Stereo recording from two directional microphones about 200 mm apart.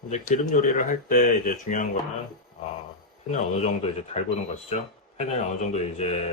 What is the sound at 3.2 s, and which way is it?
Speech, 35° left (ahead or behind).